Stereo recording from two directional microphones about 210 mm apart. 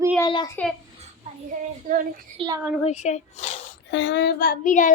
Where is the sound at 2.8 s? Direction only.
35° left (ahead or behind).